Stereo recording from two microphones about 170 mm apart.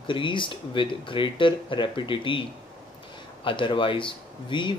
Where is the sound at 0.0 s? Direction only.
30° left (ahead or behind).